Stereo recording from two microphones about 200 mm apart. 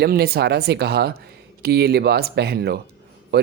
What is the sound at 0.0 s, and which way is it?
Speech, 50° right (ahead or behind).